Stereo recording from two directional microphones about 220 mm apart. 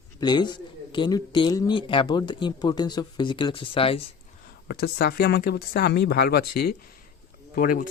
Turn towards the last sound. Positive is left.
turn(degrees=40)  # may be behind; listen again after turning